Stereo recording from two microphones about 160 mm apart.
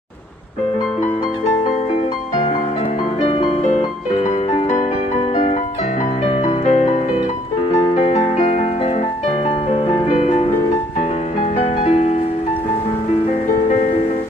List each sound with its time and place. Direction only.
3.2 s music: 40° left (ahead or behind)
11.6 s music: 40° left (ahead or behind)